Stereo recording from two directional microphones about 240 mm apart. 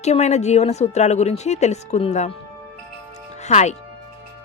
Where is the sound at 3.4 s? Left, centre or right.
Left.